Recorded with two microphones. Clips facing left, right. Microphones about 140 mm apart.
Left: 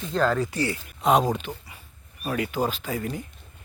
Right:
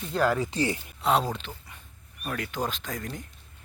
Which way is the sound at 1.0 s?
15° left (ahead or behind).